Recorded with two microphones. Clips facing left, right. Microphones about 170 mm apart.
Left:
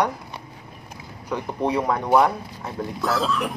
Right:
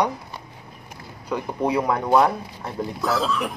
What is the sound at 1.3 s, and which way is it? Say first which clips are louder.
Speech: right 1 dB; 10° right (ahead or behind).